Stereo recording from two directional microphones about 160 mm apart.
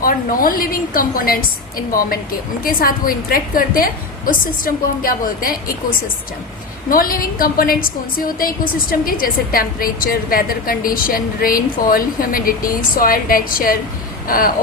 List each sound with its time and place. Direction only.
0.0 s a woman's voice: 65° left (ahead or behind)
6.9 s a woman's voice: 65° left (ahead or behind)